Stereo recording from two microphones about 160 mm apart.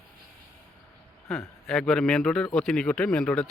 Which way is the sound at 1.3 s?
Centre (ahead or behind).